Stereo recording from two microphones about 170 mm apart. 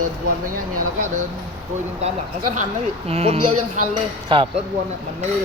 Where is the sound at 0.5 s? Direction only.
50° right (ahead or behind).